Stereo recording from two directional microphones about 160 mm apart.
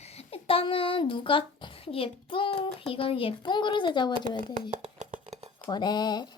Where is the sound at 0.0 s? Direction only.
40° left (ahead or behind).